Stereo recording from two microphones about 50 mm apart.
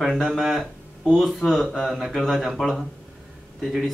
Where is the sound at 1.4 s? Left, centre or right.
Centre.